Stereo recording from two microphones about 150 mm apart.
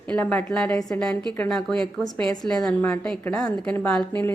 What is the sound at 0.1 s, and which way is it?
A woman's voice, 10° left (ahead or behind).